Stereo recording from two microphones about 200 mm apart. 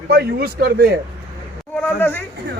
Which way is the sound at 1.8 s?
10° left (ahead or behind).